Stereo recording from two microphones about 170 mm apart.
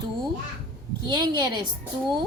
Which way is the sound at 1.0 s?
25° right (ahead or behind).